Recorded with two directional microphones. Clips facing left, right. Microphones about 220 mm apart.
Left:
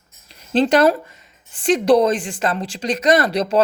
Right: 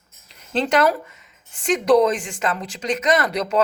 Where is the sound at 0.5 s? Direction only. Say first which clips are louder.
Left 4 dB; 35° left (ahead or behind).